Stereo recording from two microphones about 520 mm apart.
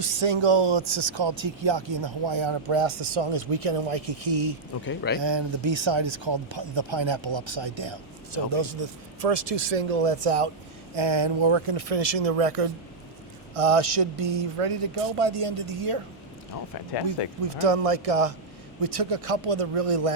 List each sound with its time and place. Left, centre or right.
0.0 s speech: right
4.9 s a man's voice: centre
5.2 s speech: right
10.9 s speech: right
17.4 s speech: right